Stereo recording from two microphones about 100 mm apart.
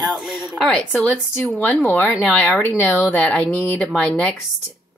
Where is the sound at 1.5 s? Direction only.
20° left (ahead or behind).